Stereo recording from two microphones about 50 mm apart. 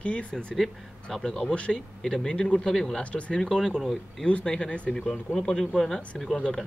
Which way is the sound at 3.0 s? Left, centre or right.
Left.